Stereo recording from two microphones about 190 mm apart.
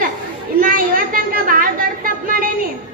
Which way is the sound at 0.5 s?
50° right (ahead or behind).